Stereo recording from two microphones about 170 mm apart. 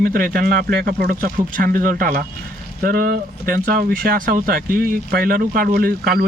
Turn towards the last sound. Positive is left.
turn(degrees=-65)  # may be behind; listen again after turning